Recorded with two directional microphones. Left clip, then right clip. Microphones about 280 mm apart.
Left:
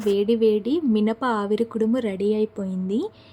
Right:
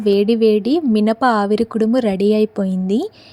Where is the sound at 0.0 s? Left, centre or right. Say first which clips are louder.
Right 6 dB; right.